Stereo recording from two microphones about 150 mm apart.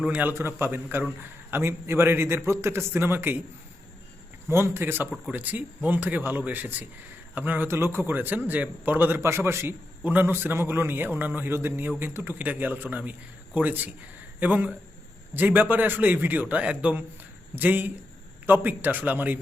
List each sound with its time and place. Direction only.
0.0 s a man's voice: 10° right (ahead or behind)
4.4 s a man's voice: 15° right (ahead or behind)